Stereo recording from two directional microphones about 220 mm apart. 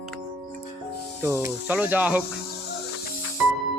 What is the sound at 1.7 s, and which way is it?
Speech, 5° right (ahead or behind).